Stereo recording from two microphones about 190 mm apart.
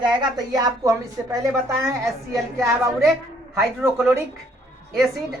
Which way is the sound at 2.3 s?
Centre (ahead or behind).